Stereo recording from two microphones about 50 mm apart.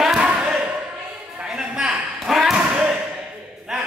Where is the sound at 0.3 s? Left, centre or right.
Right.